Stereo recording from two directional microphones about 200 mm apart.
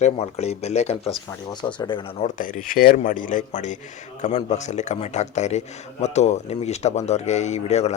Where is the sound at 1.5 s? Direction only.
20° left (ahead or behind).